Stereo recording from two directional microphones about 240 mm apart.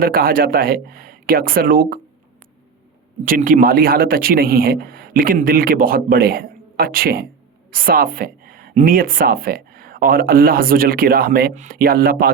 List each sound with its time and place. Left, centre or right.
0.0 s a woman's voice: right
3.2 s a woman's voice: right